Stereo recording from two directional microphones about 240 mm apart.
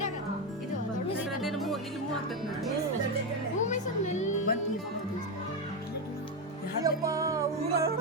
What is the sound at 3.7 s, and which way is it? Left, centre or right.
Music, left.